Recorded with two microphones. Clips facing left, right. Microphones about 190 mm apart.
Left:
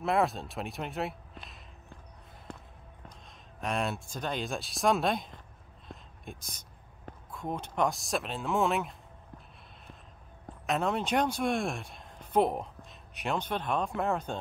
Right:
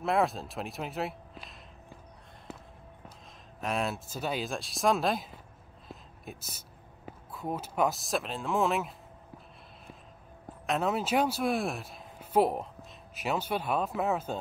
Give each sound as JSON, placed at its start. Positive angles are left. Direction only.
{"t": 0.0, "sound": "speech", "side_deg": 0}
{"t": 2.5, "sound": "basketball bounce", "side_deg": -5}
{"t": 3.6, "sound": "speech", "side_deg": 0}
{"t": 5.9, "sound": "a sound", "side_deg": -5}
{"t": 7.1, "sound": "speech", "side_deg": -5}
{"t": 10.7, "sound": "speech", "side_deg": -5}